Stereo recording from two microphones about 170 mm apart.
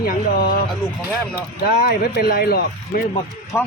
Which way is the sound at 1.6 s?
60° left (ahead or behind).